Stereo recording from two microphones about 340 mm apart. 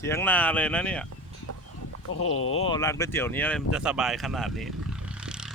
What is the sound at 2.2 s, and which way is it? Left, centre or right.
Speech, left.